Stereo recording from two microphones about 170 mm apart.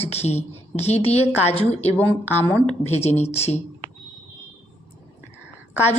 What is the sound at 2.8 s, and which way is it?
Speech, 40° left (ahead or behind).